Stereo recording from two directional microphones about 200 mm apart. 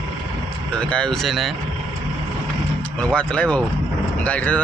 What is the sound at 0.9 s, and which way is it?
Speech, 5° left (ahead or behind).